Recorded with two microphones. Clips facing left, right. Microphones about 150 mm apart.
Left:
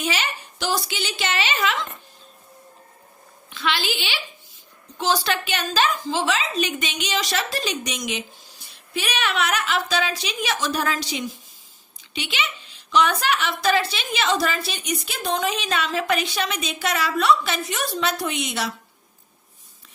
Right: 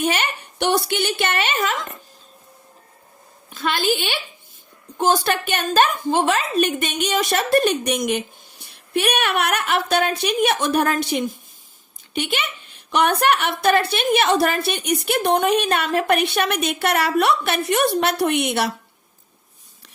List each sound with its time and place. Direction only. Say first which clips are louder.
0.0 s a woman's voice: right 4 dB; 55° right (ahead or behind)
3.5 s a woman's voice: right 5 dB; 45° right (ahead or behind); by 18.7 s 60° right (ahead or behind)